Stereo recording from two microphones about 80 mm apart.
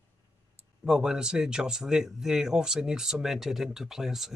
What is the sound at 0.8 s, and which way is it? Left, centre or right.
Speech, centre.